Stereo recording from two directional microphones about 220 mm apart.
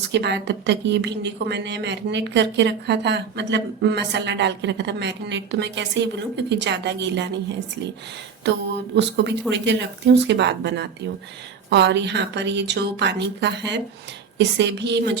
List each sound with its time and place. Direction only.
0.1 s a woman's voice: 50° right (ahead or behind)
9.0 s a woman's voice: 50° right (ahead or behind)